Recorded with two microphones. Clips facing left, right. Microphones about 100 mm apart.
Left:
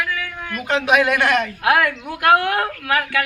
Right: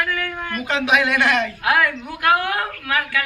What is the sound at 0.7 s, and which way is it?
Speech, 40° left (ahead or behind).